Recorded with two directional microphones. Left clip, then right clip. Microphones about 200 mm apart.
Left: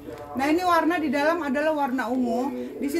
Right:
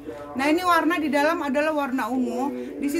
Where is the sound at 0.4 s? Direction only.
20° right (ahead or behind).